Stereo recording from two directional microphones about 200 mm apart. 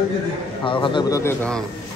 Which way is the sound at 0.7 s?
25° left (ahead or behind).